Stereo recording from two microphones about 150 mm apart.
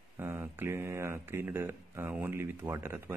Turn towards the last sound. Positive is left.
turn(degrees=-15)  # may be behind; listen again after turning